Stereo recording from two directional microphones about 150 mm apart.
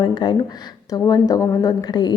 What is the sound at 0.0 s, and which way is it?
A woman's voice, 30° left (ahead or behind).